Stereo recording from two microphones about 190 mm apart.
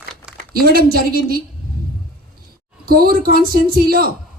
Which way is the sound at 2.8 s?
50° right (ahead or behind).